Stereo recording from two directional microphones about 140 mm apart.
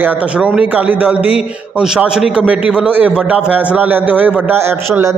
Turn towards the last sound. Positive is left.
turn(degrees=-20)  # may be behind; listen again after turning